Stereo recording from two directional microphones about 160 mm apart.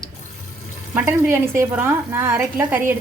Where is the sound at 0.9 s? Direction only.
15° right (ahead or behind).